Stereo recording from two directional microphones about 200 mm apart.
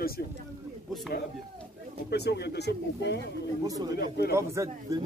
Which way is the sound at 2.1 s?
55° left (ahead or behind).